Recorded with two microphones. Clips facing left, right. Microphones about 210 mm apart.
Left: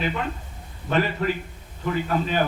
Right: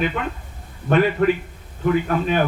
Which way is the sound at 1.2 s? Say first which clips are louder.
Right 7 dB; 65° right (ahead or behind).